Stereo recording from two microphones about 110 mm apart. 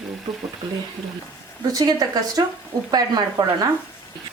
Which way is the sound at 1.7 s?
35° right (ahead or behind).